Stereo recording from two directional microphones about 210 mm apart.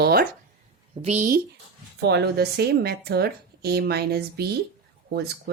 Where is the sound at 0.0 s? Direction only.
45° right (ahead or behind).